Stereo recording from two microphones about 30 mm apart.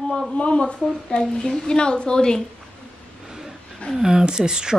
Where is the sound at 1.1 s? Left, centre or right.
Left.